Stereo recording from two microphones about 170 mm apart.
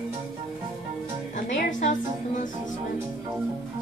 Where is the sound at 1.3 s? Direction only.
45° left (ahead or behind).